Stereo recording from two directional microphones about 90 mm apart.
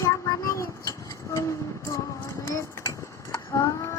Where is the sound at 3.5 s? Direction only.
35° left (ahead or behind).